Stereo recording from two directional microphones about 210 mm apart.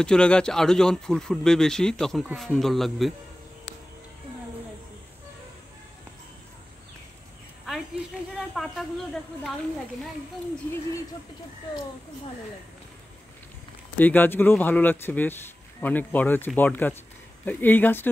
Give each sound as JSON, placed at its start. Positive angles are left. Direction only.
{"t": 0.0, "sound": "speech", "side_deg": 5}
{"t": 8.4, "sound": "speech", "side_deg": 0}
{"t": 13.9, "sound": "speech", "side_deg": 10}